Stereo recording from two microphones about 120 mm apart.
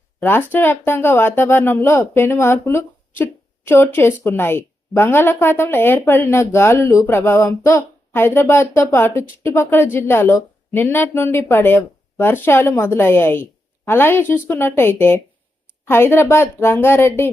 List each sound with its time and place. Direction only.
0.2 s a woman's voice: 15° left (ahead or behind)